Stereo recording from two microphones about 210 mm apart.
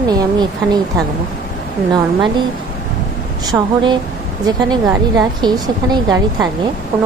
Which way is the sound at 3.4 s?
20° right (ahead or behind).